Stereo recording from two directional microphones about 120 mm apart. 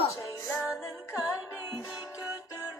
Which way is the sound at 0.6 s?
10° right (ahead or behind).